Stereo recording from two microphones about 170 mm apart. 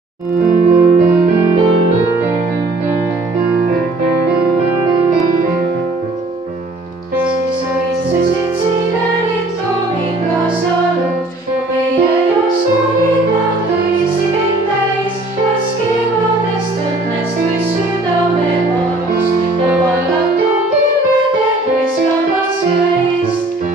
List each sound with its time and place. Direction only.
0.5 s music: 50° right (ahead or behind)